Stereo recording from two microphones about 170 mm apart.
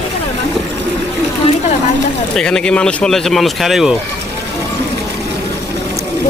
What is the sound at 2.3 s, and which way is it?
Speech, 5° left (ahead or behind).